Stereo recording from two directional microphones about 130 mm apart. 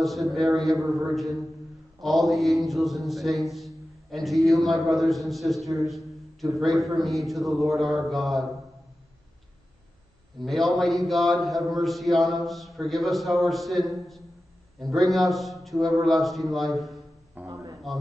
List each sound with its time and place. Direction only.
0.0 s a man's voice: centre (ahead or behind)
10.4 s a man's voice: centre (ahead or behind)
17.5 s a sound: 25° right (ahead or behind)